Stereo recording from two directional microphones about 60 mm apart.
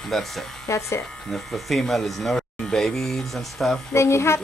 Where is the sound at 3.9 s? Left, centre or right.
Left.